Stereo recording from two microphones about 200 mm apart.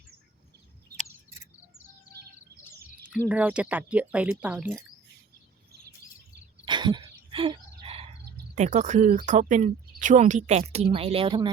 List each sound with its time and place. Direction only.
3.2 s speech: 5° right (ahead or behind)
6.7 s a sound: 20° right (ahead or behind)
8.5 s speech: 35° right (ahead or behind)